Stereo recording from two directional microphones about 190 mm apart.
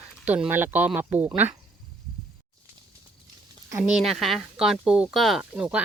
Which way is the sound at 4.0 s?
Centre (ahead or behind).